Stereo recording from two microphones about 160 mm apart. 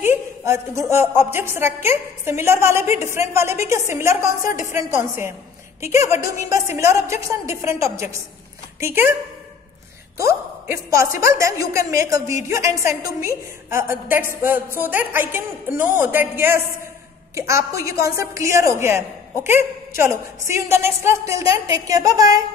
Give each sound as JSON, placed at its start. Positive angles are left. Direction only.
{"t": 0.0, "sound": "a woman's voice", "side_deg": -15}
{"t": 10.1, "sound": "a woman's voice", "side_deg": -20}